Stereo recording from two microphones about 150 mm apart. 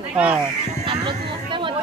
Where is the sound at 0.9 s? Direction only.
35° right (ahead or behind).